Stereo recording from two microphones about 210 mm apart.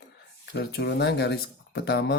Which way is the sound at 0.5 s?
50° left (ahead or behind).